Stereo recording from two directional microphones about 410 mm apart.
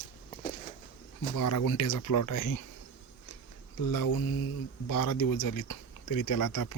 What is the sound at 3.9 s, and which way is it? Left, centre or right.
Speech, left.